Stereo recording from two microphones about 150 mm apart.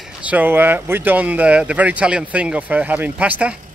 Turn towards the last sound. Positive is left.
turn(degrees=-10)  # may be behind; listen again after turning